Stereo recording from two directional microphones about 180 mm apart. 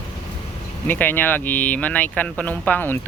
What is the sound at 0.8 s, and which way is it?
Speech, 10° left (ahead or behind).